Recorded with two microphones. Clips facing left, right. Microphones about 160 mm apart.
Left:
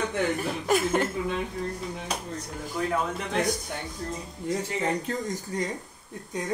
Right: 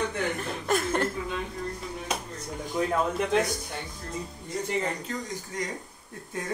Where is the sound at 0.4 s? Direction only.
5° left (ahead or behind).